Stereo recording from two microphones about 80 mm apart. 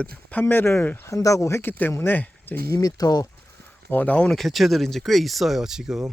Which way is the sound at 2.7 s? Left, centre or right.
Left.